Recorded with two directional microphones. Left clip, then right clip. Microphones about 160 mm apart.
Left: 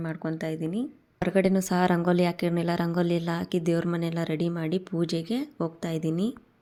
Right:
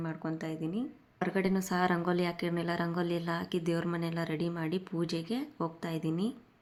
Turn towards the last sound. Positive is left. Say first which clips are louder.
# left 5 dB
turn(degrees=25)  # may be behind; listen again after turning